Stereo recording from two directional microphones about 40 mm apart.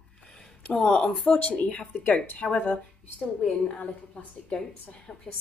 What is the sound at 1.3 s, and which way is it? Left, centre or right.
A woman's voice, left.